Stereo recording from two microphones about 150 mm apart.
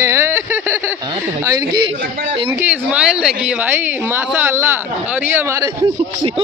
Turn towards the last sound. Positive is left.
turn(degrees=-20)  # may be behind; listen again after turning